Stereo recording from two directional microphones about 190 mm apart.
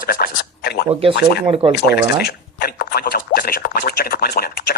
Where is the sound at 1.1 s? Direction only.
65° left (ahead or behind).